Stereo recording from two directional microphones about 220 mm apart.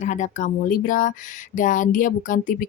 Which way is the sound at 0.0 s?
35° left (ahead or behind).